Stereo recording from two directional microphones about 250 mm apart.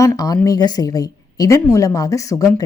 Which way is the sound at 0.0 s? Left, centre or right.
Centre.